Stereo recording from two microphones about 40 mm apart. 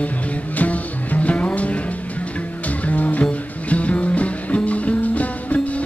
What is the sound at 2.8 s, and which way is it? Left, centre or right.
Music, left.